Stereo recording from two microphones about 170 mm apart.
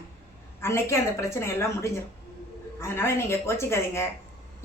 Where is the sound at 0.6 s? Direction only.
15° left (ahead or behind).